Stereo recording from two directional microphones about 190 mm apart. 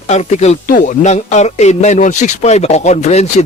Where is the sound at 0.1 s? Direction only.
35° left (ahead or behind).